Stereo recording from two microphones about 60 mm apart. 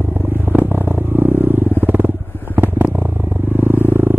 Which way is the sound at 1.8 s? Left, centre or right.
Right.